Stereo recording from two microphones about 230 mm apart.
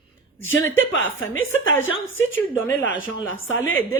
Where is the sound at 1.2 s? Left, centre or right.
Left.